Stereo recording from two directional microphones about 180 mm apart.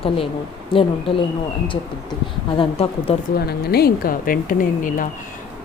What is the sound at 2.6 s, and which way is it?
Speech, 30° left (ahead or behind).